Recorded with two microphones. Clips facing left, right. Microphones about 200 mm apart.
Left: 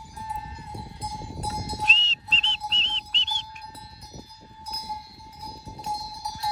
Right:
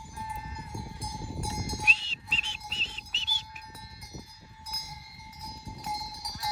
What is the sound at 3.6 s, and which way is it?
Cowbell, 35° left (ahead or behind).